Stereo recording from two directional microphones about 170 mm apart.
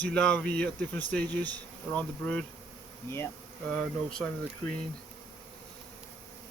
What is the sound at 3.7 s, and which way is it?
Speech, 5° left (ahead or behind).